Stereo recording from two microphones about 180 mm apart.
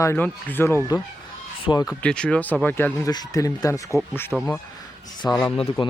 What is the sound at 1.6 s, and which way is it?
Speech, 25° left (ahead or behind).